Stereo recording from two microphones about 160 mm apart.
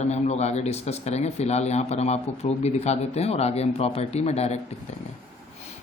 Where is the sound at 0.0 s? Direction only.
45° left (ahead or behind).